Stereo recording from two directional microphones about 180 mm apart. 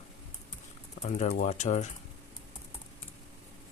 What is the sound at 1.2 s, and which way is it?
Speech, 40° left (ahead or behind).